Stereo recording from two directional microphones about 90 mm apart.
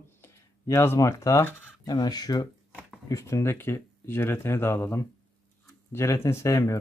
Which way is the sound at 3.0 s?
35° left (ahead or behind).